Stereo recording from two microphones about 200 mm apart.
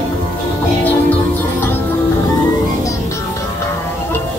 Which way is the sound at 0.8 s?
10° left (ahead or behind).